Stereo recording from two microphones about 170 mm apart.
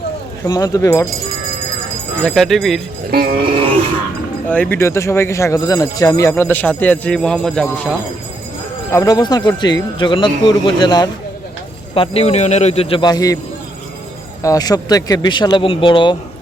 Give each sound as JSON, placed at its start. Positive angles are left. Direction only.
{"t": 0.4, "sound": "a man's voice", "side_deg": 20}
{"t": 2.2, "sound": "speech", "side_deg": 0}
{"t": 3.1, "sound": "music", "side_deg": -65}
{"t": 4.4, "sound": "speech", "side_deg": 10}
{"t": 8.9, "sound": "a man's voice", "side_deg": 20}
{"t": 11.9, "sound": "a man's voice", "side_deg": 35}
{"t": 14.4, "sound": "a man's voice", "side_deg": 20}